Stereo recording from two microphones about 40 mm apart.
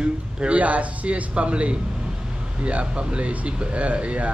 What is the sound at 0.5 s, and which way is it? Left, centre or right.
Speech, right.